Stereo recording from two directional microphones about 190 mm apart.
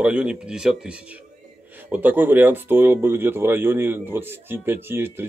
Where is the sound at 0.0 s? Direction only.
5° right (ahead or behind).